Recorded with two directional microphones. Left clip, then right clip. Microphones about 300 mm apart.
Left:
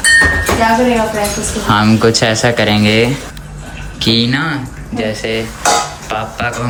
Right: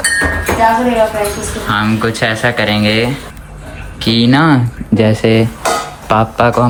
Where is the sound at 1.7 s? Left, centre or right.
Centre.